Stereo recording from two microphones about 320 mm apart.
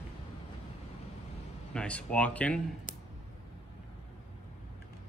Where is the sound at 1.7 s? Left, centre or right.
Centre.